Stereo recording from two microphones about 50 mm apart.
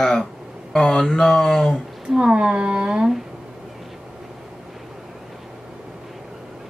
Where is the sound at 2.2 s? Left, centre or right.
Centre.